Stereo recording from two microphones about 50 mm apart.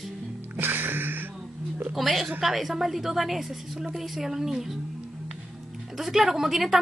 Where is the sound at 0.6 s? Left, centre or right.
Right.